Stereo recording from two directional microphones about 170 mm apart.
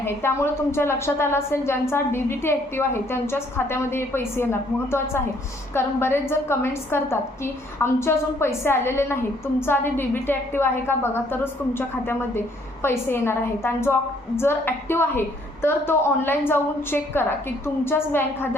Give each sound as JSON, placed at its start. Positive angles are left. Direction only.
{"t": 0.0, "sound": "a woman's voice", "side_deg": 15}